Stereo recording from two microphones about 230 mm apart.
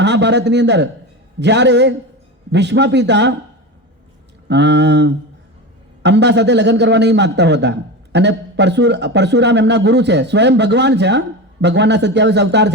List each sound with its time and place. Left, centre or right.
0.0 s a man's voice: right
4.4 s a man's voice: right